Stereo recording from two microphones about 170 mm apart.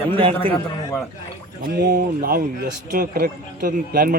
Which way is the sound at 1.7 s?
65° right (ahead or behind).